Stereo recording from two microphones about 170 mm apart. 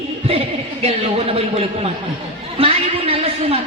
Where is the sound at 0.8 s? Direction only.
35° right (ahead or behind).